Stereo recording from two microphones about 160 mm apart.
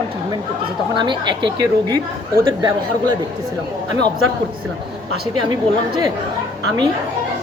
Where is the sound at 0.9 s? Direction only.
30° right (ahead or behind).